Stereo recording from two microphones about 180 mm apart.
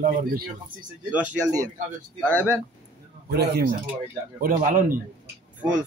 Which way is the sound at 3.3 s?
60° right (ahead or behind).